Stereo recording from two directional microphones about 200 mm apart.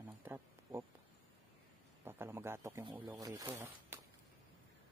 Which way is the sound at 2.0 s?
10° right (ahead or behind).